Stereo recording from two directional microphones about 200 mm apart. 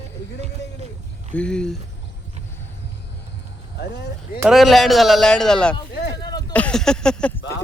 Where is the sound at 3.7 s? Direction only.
60° left (ahead or behind).